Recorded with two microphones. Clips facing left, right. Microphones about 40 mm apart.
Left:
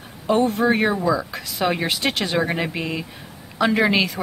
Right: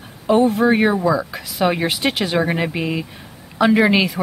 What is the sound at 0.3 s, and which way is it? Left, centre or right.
Speech, centre.